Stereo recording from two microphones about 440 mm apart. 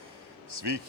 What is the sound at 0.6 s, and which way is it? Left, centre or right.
Speech, right.